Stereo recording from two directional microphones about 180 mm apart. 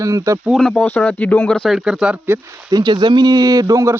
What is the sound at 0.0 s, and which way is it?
Speech, 15° right (ahead or behind).